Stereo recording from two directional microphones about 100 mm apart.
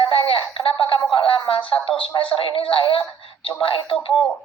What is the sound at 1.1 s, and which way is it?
Speech, 60° left (ahead or behind).